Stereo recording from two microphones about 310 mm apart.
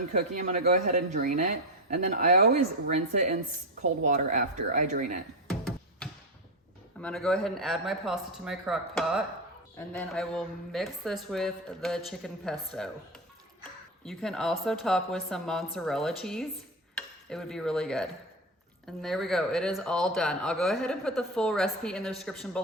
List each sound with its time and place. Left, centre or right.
0.2 s speech: right
5.5 s music: centre
7.0 s a woman's voice: centre